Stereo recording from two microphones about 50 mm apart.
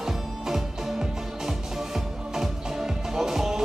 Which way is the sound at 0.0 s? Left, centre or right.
Centre.